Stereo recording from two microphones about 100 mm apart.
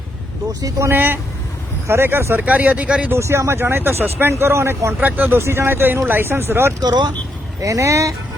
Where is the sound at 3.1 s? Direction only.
25° right (ahead or behind).